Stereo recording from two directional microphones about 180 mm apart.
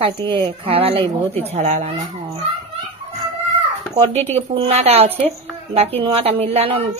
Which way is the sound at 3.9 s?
35° right (ahead or behind).